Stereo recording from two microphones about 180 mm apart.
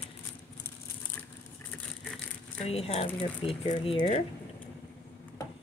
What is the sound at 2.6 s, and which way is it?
Speech, 35° left (ahead or behind).